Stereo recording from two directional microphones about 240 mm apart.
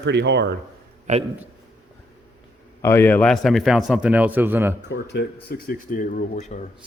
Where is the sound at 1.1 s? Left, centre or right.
Right.